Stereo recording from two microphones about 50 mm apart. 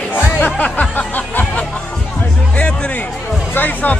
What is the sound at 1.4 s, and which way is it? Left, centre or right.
Music, left.